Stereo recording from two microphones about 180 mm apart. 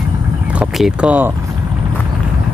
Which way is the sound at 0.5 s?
5° right (ahead or behind).